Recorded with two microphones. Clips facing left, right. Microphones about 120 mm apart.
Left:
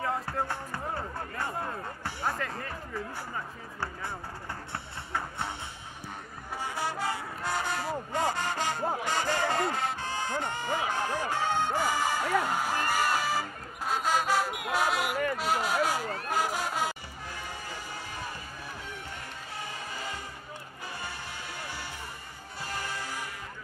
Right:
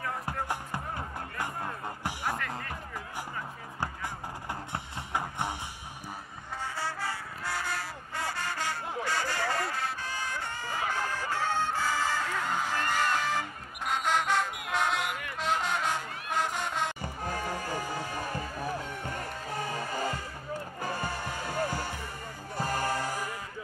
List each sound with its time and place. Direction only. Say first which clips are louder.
2.4 s music: left 1 dB; 30° left (ahead or behind)
3.8 s music: right 1 dB; 15° right (ahead or behind)
6.6 s music: left 3 dB; 15° left (ahead or behind)
14.7 s a sound: left 2 dB; 5° left (ahead or behind)
15.3 s music: left 2 dB; 5° left (ahead or behind)
17.0 s music: right 7 dB; 50° right (ahead or behind)
19.5 s music: right 6 dB; 45° right (ahead or behind)